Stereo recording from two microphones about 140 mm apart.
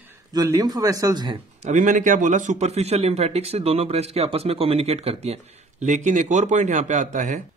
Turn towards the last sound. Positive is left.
turn(degrees=-60)  # may be behind; listen again after turning